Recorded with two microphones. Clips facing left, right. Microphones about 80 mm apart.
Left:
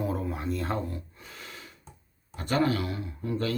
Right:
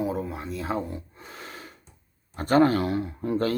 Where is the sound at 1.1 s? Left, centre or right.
Right.